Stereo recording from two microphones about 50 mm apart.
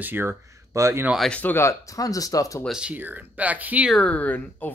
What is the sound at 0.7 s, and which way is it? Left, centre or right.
Speech, right.